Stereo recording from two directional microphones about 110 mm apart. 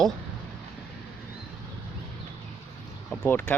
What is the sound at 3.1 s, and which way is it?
Vehicle, 15° left (ahead or behind).